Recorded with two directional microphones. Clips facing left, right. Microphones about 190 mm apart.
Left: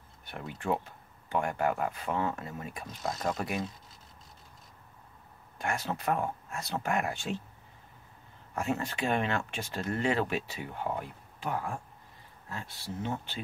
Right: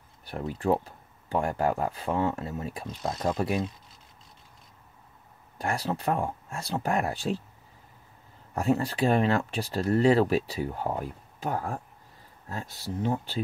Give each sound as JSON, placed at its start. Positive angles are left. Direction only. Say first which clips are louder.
{"t": 0.2, "sound": "speech", "louder": "right 8 dB", "side_deg": -35}
{"t": 5.6, "sound": "speech", "louder": "right 4 dB", "side_deg": -35}
{"t": 8.5, "sound": "speech", "louder": "right 6 dB", "side_deg": -35}